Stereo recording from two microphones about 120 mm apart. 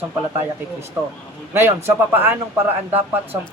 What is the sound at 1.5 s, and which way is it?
A man's voice, 20° right (ahead or behind).